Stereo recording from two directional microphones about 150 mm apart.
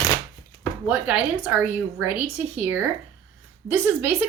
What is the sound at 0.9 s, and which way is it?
Speech, 10° right (ahead or behind).